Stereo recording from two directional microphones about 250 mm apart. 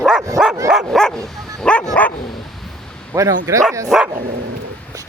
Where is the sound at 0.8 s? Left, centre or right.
Centre.